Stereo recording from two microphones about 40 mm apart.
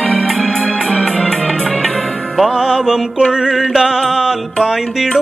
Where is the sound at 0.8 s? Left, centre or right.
Centre.